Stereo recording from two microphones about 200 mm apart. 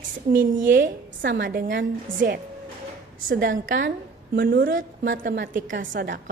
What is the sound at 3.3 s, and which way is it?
A woman's voice, 45° right (ahead or behind).